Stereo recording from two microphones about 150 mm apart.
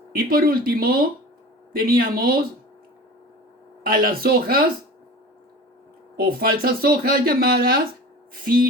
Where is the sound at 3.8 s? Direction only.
75° right (ahead or behind).